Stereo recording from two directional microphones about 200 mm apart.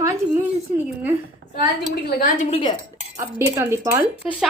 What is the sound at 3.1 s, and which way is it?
Speech, 15° right (ahead or behind).